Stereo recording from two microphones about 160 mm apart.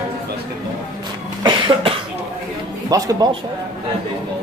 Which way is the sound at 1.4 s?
30° right (ahead or behind).